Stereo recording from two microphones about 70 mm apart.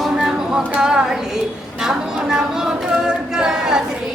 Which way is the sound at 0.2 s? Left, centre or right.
Centre.